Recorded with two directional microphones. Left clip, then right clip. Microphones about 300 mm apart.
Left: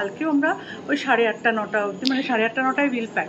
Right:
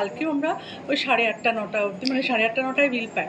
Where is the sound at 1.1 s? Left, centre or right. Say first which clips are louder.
Left 3 dB; left.